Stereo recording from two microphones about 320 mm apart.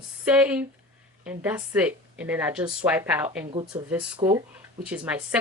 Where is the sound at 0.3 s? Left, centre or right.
Centre.